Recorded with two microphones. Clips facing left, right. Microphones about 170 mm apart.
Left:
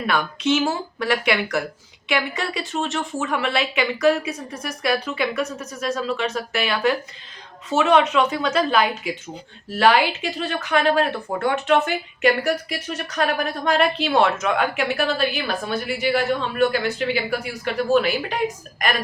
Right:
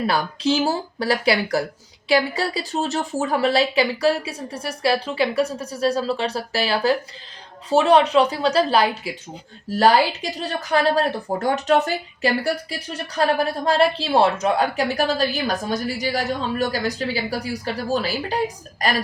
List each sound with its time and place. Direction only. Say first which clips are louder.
0.1 s speech: even; 35° right (ahead or behind)